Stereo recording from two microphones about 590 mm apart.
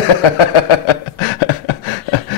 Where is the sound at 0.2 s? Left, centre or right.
Left.